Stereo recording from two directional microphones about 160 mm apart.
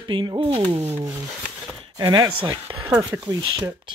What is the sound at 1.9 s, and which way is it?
Speech, 25° right (ahead or behind).